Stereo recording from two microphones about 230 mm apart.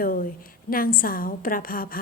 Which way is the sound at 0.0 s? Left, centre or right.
Left.